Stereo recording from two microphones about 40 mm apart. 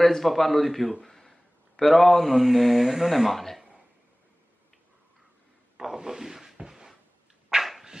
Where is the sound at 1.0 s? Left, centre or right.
Centre.